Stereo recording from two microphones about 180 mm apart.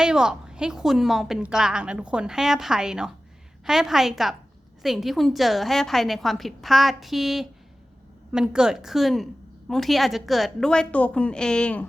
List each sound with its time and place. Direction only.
0.0 s a woman's voice: 5° right (ahead or behind)